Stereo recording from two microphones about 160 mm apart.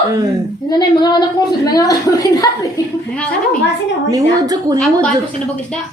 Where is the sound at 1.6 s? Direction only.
20° left (ahead or behind).